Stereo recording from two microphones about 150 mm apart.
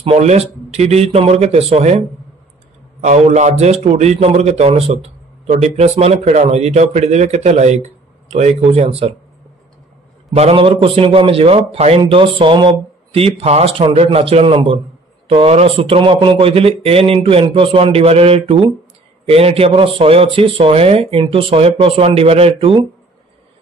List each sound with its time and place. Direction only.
0.0 s a man's voice: 45° right (ahead or behind)
10.3 s speech: 40° right (ahead or behind)